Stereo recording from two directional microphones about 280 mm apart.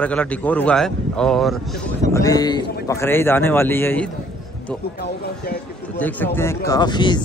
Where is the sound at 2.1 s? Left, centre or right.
Centre.